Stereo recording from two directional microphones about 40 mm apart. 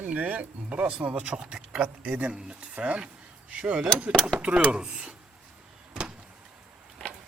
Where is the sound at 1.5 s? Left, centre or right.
Centre.